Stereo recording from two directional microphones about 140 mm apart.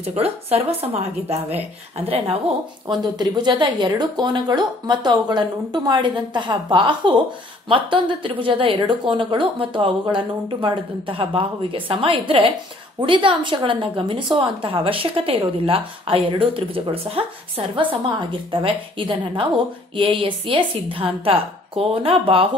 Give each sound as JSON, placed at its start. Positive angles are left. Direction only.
{"t": 0.0, "sound": "a woman's voice", "side_deg": -45}
{"t": 2.9, "sound": "a woman's voice", "side_deg": -30}